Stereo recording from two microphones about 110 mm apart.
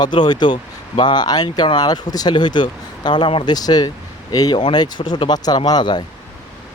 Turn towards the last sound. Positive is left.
turn(degrees=40)  # may be behind; listen again after turning